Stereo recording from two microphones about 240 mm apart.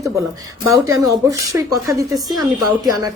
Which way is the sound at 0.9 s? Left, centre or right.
Centre.